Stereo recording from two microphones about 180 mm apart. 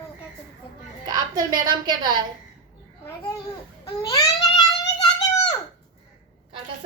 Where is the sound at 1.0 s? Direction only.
20° right (ahead or behind).